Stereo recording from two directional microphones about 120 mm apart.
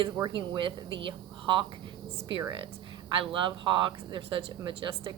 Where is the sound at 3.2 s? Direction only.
45° right (ahead or behind).